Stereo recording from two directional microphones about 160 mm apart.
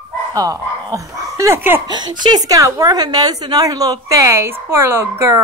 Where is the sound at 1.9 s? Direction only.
25° right (ahead or behind).